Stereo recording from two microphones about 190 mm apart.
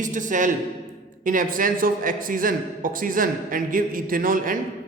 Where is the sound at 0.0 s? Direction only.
40° right (ahead or behind).